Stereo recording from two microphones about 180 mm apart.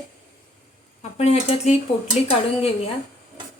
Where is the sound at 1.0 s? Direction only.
35° left (ahead or behind).